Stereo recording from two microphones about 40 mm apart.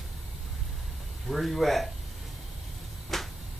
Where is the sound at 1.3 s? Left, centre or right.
Centre.